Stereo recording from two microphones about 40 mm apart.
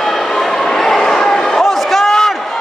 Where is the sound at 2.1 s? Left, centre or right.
Centre.